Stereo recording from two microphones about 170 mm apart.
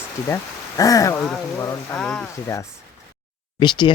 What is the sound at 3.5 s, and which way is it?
Speech, 25° left (ahead or behind).